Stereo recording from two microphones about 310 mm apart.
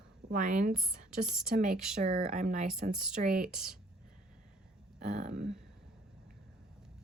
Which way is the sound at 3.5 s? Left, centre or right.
Centre.